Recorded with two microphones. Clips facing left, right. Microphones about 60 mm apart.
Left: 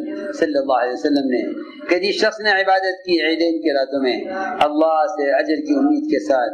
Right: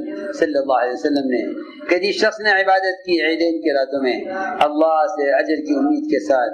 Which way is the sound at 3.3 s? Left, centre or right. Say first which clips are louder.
Even; right.